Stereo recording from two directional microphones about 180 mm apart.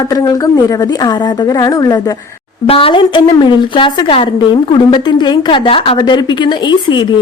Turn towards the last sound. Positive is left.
turn(degrees=25)  # may be behind; listen again after turning